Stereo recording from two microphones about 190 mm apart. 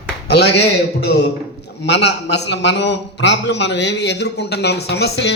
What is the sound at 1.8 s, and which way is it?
A man's voice, 65° left (ahead or behind).